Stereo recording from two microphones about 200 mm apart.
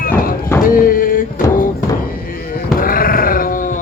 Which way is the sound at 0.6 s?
45° left (ahead or behind).